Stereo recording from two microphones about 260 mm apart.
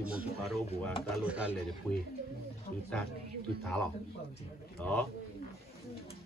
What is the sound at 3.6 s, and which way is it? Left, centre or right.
A man's voice, centre.